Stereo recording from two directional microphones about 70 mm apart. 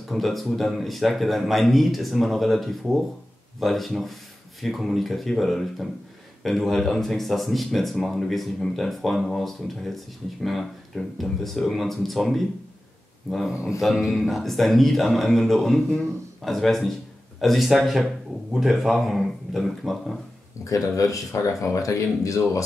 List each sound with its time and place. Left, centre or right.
0.1 s speech: centre
20.6 s speech: left